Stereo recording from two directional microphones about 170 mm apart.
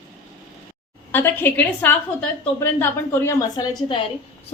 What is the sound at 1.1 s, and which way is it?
A woman's voice, 10° left (ahead or behind).